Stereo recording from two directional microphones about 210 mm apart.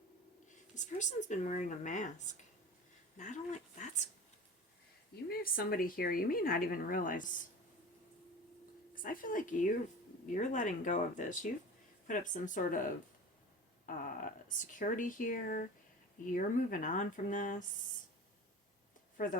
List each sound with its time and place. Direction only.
0.9 s speech: 35° left (ahead or behind)
5.3 s speech: 45° left (ahead or behind)
9.0 s speech: 40° left (ahead or behind)
19.1 s speech: 40° left (ahead or behind)